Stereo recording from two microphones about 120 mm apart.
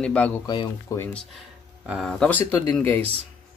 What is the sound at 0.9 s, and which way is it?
Speech, 25° left (ahead or behind).